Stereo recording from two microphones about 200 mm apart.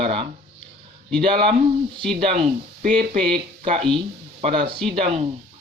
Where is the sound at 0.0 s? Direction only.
30° right (ahead or behind).